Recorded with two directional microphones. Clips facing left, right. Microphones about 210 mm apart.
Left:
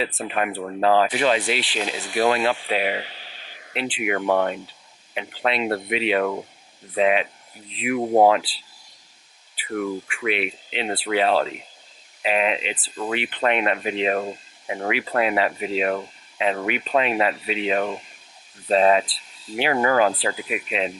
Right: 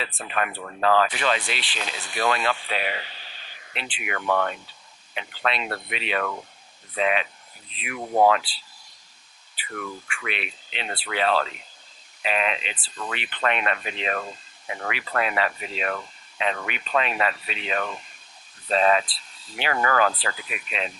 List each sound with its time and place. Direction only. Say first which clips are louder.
0.0 s speech: left 4 dB; 10° left (ahead or behind)
7.9 s speech: left 7 dB; 25° left (ahead or behind)
8.2 s speech: even; 5° left (ahead or behind)
9.6 s speech: left 9 dB; 15° left (ahead or behind)
19.7 s speech: left 3 dB; 15° left (ahead or behind)